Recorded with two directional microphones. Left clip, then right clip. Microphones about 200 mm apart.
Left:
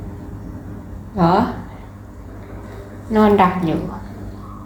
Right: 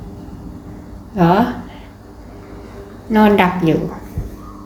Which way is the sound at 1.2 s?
30° right (ahead or behind).